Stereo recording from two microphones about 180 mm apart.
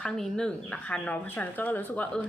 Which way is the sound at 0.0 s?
5° left (ahead or behind).